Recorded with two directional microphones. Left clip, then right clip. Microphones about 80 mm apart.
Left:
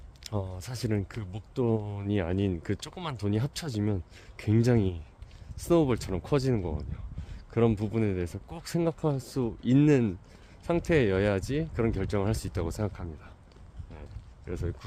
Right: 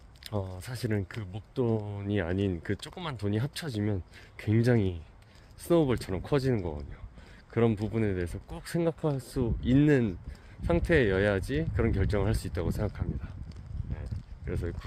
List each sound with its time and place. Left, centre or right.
0.3 s speech: left
0.9 s speech: left
14.4 s speech: left